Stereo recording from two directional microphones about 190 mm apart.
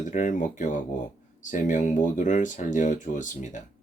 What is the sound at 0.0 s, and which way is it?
Speech, 40° left (ahead or behind).